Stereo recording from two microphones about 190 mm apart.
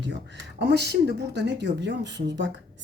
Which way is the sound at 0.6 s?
60° right (ahead or behind).